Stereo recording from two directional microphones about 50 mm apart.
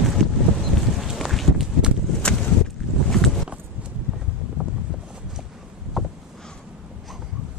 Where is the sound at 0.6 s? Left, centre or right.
Centre.